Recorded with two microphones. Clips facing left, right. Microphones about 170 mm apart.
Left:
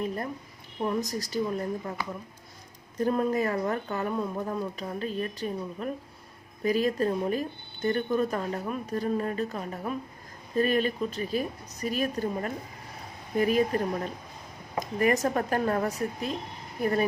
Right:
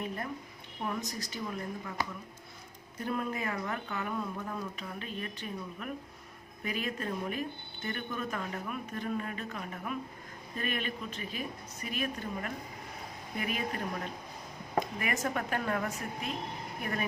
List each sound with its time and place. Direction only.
0.9 s speech: 40° left (ahead or behind)
3.0 s speech: 40° left (ahead or behind)